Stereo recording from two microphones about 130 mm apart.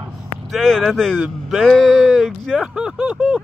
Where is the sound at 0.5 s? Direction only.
Centre (ahead or behind).